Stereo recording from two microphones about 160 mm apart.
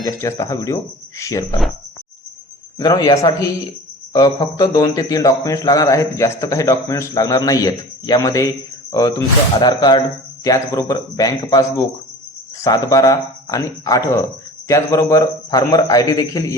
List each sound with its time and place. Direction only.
0.0 s a man's voice: 20° left (ahead or behind)
2.7 s a man's voice: 20° left (ahead or behind)